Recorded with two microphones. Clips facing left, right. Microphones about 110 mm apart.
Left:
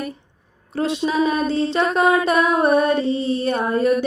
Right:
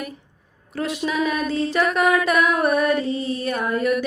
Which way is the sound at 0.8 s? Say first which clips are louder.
Left 4 dB; 30° left (ahead or behind).